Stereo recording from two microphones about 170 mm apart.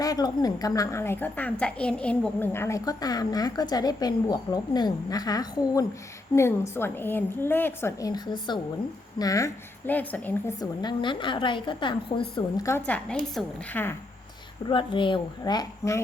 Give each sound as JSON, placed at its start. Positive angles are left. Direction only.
{"t": 0.0, "sound": "a woman's voice", "side_deg": 20}
{"t": 10.6, "sound": "a woman's voice", "side_deg": 25}
{"t": 14.7, "sound": "a woman's voice", "side_deg": 30}